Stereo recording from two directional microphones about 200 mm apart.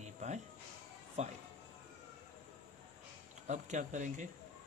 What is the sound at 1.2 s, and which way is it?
Speech, 35° right (ahead or behind).